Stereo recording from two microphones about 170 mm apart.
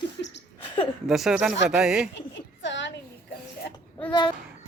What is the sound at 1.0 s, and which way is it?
Speech, centre (ahead or behind).